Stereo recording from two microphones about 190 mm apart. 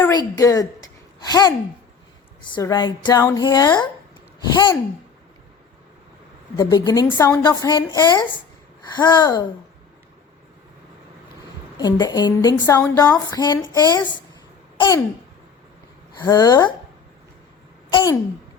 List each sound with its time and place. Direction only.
0.3 s speech: 20° left (ahead or behind)
2.6 s a woman's voice: 20° left (ahead or behind)
6.6 s a woman's voice: 20° left (ahead or behind)
11.8 s a woman's voice: 20° left (ahead or behind)
14.8 s babbling: 15° left (ahead or behind)
16.1 s a woman's voice: 20° left (ahead or behind)
17.9 s a woman's voice: 20° left (ahead or behind)